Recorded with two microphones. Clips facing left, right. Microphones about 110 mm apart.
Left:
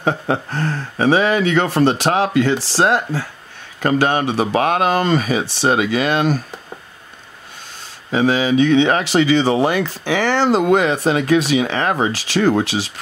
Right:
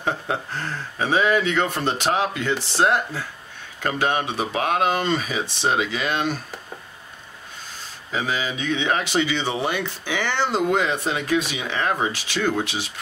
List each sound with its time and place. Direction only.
0.0 s speech: 65° left (ahead or behind); by 3.0 s 85° left
3.8 s speech: 65° left (ahead or behind)
8.1 s speech: 65° left (ahead or behind); by 12.9 s 90° left